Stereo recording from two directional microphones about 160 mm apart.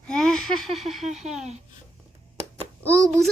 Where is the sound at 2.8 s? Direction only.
5° left (ahead or behind).